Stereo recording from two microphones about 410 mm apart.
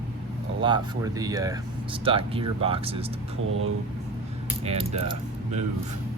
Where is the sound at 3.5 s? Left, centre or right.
Right.